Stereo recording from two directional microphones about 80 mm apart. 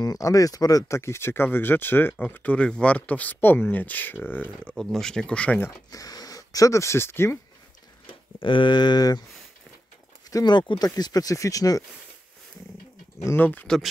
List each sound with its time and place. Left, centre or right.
0.0 s speech: left
4.7 s speech: centre
5.9 s speech: left
8.1 s speech: left
10.3 s a sound: left
10.8 s speech: left
13.4 s speech: left